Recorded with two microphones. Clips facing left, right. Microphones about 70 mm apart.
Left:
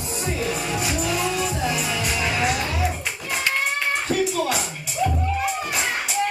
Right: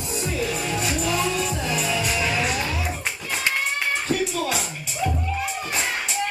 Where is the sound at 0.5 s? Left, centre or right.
Centre.